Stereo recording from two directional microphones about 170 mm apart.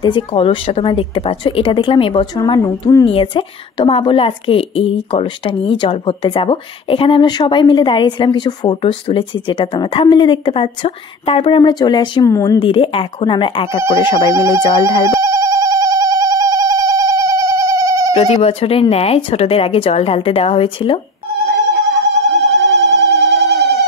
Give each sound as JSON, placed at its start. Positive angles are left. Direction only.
{"t": 0.0, "sound": "a woman's voice", "side_deg": 30}
{"t": 12.5, "sound": "a woman's voice", "side_deg": 30}
{"t": 14.3, "sound": "speech", "side_deg": -20}
{"t": 14.6, "sound": "a woman's voice", "side_deg": 25}
{"t": 15.0, "sound": "a sound", "side_deg": -20}
{"t": 18.3, "sound": "speech", "side_deg": 35}
{"t": 22.3, "sound": "telephone bell ringing", "side_deg": 0}